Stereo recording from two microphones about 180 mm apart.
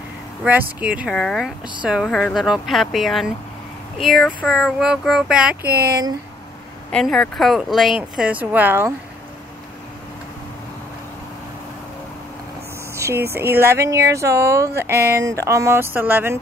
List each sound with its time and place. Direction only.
0.4 s speech: 10° right (ahead or behind)
5.7 s speech: 60° right (ahead or behind)
6.9 s speech: 5° left (ahead or behind); by 8.9 s 10° right (ahead or behind)
12.9 s a sound: 15° right (ahead or behind)
13.3 s speech: 15° right (ahead or behind)